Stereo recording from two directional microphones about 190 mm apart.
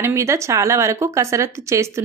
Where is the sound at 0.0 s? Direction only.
15° right (ahead or behind).